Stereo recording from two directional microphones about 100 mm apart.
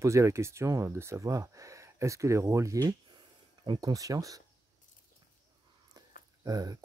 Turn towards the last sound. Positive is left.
turn(degrees=-40)  # may be behind; listen again after turning